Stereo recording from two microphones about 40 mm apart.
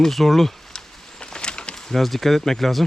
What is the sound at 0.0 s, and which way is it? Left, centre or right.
Speech, centre.